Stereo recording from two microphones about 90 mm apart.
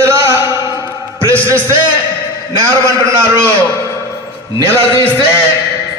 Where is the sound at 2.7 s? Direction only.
30° right (ahead or behind).